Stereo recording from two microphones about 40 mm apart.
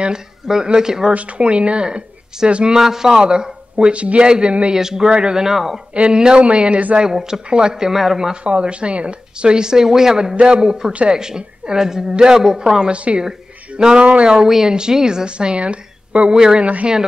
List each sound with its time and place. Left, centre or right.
0.7 s speech: centre
1.1 s speech: right
2.8 s speech: centre; by 4.7 s right
4.7 s speech: centre
5.9 s speech: right
7.2 s speech: centre
8.5 s speech: right
10.9 s speech: right
11.1 s speech: centre
12.9 s speech: right
16.3 s speech: centre